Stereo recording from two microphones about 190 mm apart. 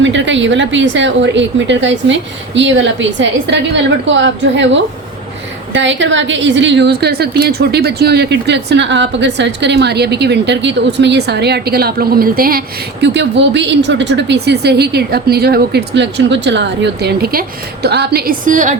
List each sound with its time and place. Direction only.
0.0 s a woman's voice: 75° right (ahead or behind); by 18.8 s 40° right (ahead or behind)